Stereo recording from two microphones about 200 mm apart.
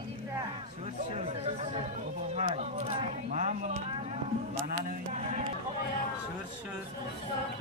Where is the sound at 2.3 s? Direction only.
35° right (ahead or behind).